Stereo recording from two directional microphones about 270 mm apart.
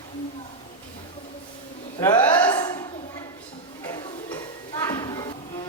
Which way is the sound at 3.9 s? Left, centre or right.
Centre.